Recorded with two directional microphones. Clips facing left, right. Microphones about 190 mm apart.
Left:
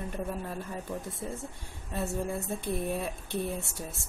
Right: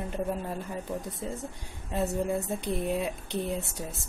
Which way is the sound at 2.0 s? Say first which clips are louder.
Right 4 dB; 20° right (ahead or behind).